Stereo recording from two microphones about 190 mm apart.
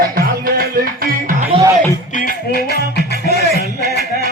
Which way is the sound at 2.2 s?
50° left (ahead or behind).